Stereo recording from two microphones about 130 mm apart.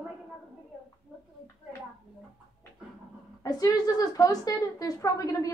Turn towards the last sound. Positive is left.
turn(degrees=25)  # may be behind; listen again after turning